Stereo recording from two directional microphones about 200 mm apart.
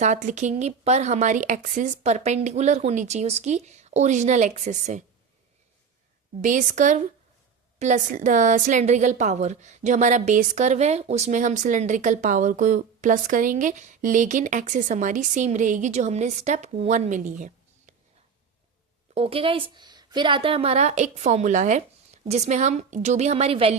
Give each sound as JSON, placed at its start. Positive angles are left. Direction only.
{"t": 0.0, "sound": "a woman's voice", "side_deg": -35}
{"t": 6.4, "sound": "a woman's voice", "side_deg": -40}
{"t": 19.1, "sound": "a woman's voice", "side_deg": -30}